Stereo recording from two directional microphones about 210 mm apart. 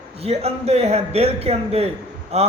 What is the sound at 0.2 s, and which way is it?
Speech, 30° right (ahead or behind).